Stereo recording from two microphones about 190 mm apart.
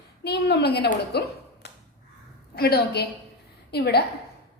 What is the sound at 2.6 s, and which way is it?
A woman's voice, 55° left (ahead or behind).